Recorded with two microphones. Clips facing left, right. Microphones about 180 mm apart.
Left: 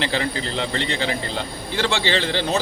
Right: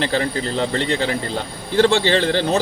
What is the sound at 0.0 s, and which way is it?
Speech, 40° right (ahead or behind).